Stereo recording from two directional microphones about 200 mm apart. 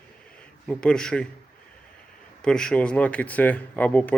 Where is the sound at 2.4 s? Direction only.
5° left (ahead or behind).